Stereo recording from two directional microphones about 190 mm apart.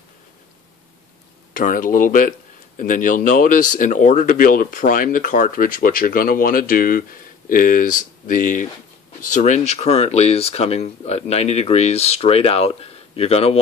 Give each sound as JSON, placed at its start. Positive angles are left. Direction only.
{"t": 1.5, "sound": "speech", "side_deg": 45}